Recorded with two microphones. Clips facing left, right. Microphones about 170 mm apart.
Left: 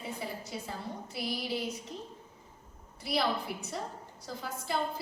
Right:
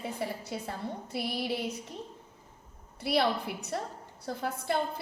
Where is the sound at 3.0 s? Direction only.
65° right (ahead or behind).